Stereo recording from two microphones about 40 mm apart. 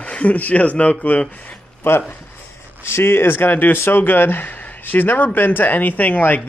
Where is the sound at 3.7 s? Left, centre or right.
Left.